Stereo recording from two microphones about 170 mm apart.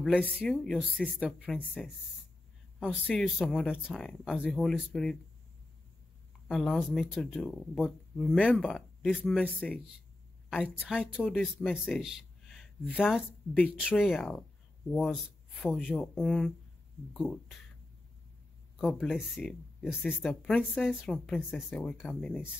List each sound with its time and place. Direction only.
0.4 s speech: centre (ahead or behind)
2.8 s speech: 5° right (ahead or behind)
6.4 s speech: centre (ahead or behind)
10.5 s speech: 5° right (ahead or behind)
11.2 s speech: 5° left (ahead or behind)
18.8 s speech: centre (ahead or behind)